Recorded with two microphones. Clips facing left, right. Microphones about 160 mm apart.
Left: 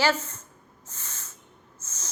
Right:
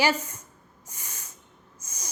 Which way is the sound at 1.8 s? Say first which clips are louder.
Right 1 dB; 15° right (ahead or behind).